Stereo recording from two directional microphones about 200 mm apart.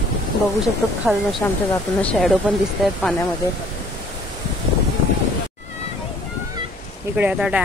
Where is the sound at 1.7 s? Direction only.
5° left (ahead or behind).